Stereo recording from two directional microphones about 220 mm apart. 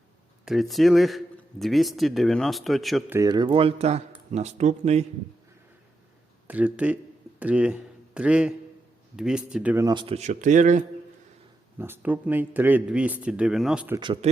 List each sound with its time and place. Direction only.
0.4 s speech: centre (ahead or behind)
3.2 s speech: 20° right (ahead or behind)
6.5 s speech: 5° right (ahead or behind)
9.8 s speech: 20° right (ahead or behind)
11.8 s speech: 10° right (ahead or behind)
14.0 s speech: 25° right (ahead or behind)